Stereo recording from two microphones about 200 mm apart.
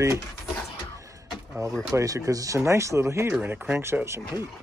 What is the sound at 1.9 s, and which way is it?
Speech, 15° right (ahead or behind).